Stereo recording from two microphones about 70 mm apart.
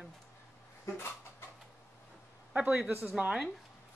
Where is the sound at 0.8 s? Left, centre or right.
Left.